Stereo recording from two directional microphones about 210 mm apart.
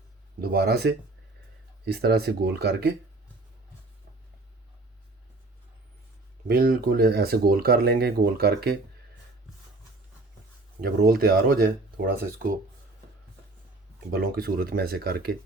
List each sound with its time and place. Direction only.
0.4 s speech: 50° right (ahead or behind)
6.5 s speech: 45° right (ahead or behind)
10.8 s speech: 45° right (ahead or behind)
14.1 s speech: 45° right (ahead or behind)